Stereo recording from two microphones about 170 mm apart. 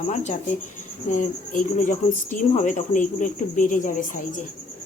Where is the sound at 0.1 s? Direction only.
45° left (ahead or behind).